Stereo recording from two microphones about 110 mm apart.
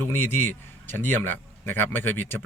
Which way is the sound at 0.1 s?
20° left (ahead or behind).